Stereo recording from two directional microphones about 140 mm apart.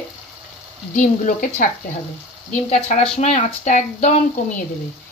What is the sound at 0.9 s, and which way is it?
Speech, 65° left (ahead or behind).